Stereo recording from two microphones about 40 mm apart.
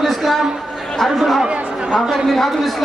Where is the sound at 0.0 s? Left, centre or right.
Centre.